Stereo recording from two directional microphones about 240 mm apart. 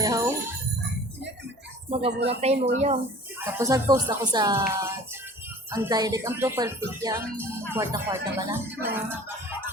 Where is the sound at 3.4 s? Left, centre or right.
Centre.